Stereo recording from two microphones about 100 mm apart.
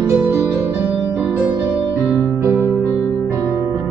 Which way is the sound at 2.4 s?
20° right (ahead or behind).